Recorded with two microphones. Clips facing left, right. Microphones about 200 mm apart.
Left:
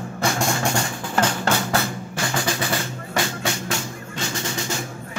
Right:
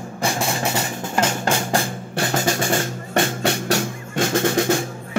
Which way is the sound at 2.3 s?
45° right (ahead or behind).